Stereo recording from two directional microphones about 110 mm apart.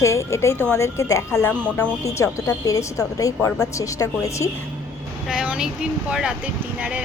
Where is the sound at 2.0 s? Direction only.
30° left (ahead or behind).